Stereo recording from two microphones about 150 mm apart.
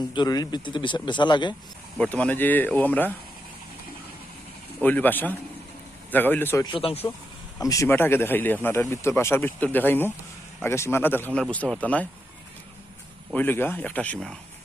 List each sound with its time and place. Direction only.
0.1 s speech: 30° left (ahead or behind)
2.0 s speech: 10° left (ahead or behind)
4.8 s speech: 10° left (ahead or behind)
6.7 s speech: 40° left (ahead or behind)
7.6 s speech: 20° left (ahead or behind)
13.3 s speech: 15° left (ahead or behind)